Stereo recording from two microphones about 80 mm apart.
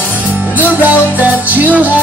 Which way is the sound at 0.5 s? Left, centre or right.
Right.